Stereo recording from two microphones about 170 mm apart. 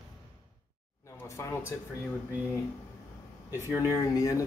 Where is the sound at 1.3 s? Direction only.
15° left (ahead or behind).